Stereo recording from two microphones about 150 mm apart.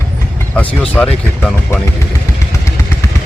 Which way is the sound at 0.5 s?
10° left (ahead or behind).